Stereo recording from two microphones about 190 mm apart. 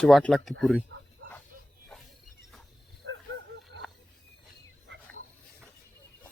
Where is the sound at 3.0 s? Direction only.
85° right.